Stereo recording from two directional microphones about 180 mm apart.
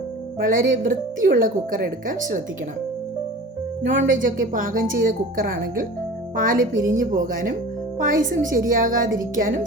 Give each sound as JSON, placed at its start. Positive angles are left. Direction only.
{"t": 0.4, "sound": "speech", "side_deg": -50}
{"t": 3.8, "sound": "speech", "side_deg": -50}
{"t": 6.7, "sound": "a woman's voice", "side_deg": -20}
{"t": 7.0, "sound": "speech", "side_deg": -45}